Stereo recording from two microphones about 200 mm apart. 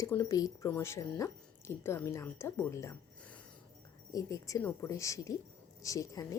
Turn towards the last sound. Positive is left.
turn(degrees=15)  # may be behind; listen again after turning